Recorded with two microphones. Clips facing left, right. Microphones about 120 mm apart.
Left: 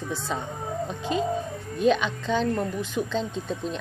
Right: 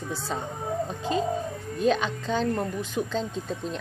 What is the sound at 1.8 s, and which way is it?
A woman's voice, 35° right (ahead or behind).